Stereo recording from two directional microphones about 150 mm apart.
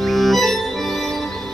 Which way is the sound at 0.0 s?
Centre (ahead or behind).